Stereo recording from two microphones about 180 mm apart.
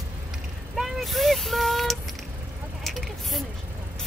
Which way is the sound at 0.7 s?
Centre (ahead or behind).